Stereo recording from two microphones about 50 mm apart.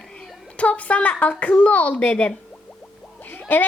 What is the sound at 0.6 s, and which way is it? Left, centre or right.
A woman's voice, left.